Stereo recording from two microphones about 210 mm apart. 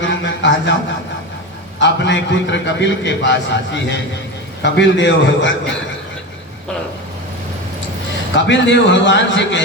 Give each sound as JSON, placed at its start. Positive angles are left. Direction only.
{"t": 0.0, "sound": "a sound", "side_deg": 60}
{"t": 1.8, "sound": "a man's voice", "side_deg": 60}
{"t": 8.4, "sound": "a man's voice", "side_deg": 60}